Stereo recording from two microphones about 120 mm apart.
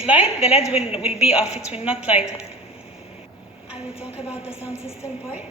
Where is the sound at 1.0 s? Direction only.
55° left (ahead or behind).